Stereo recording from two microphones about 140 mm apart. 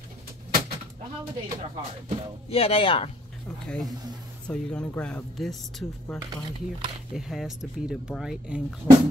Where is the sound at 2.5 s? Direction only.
40° left (ahead or behind).